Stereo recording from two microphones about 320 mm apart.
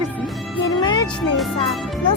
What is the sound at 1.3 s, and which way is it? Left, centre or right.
Speech, centre.